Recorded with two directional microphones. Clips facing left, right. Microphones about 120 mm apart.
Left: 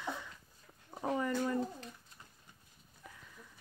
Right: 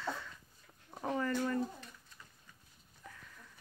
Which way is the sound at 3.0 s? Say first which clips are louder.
Right 1 dB; 10° left (ahead or behind).